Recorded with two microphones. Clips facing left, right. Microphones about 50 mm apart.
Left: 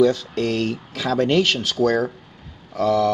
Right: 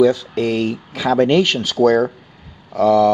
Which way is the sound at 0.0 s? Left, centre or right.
Centre.